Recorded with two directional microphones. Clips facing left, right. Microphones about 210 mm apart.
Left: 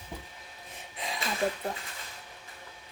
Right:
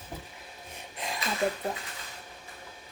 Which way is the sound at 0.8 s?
Centre (ahead or behind).